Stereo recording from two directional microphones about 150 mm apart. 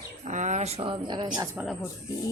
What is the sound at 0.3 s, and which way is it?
Speech, 50° right (ahead or behind).